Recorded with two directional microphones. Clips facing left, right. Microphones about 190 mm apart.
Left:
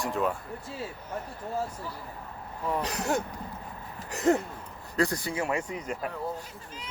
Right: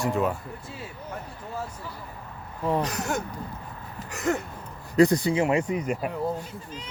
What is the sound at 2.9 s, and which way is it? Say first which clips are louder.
Speech: even; 30° left (ahead or behind).